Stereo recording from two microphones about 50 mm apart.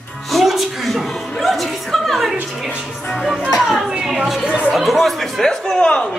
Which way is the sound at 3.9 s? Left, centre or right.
Centre.